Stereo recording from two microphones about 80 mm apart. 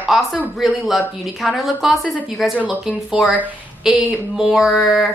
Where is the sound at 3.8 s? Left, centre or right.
Centre.